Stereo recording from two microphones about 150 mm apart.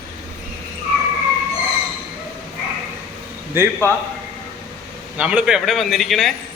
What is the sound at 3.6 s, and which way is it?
Speech, 15° right (ahead or behind).